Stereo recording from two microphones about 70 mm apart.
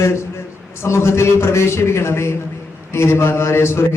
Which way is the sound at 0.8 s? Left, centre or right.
Left.